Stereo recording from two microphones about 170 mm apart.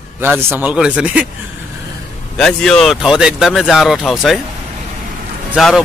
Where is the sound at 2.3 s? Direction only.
5° left (ahead or behind).